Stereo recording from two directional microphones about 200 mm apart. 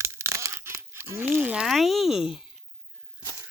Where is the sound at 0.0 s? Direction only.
15° right (ahead or behind).